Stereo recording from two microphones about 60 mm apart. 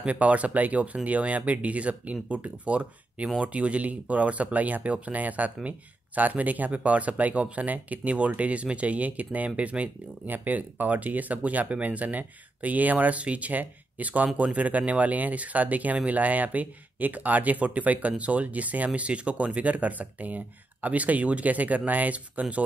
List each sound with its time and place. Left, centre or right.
0.0 s speech: right